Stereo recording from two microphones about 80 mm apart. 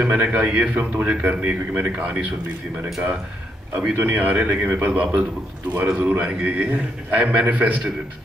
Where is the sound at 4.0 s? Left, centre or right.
Centre.